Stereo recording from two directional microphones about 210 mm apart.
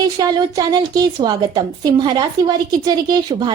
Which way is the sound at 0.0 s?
20° right (ahead or behind).